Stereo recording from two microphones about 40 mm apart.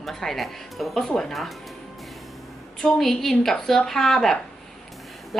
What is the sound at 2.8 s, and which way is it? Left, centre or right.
A woman's voice, centre.